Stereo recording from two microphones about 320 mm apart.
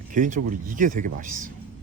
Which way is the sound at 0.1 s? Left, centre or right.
Right.